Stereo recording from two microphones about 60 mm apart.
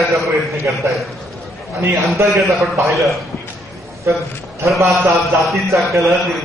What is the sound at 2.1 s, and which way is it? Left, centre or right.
Speech, right.